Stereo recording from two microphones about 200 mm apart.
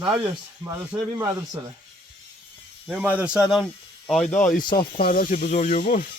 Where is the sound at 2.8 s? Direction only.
5° right (ahead or behind).